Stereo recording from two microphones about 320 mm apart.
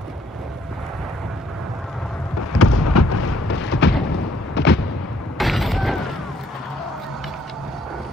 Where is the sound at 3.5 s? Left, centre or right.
Left.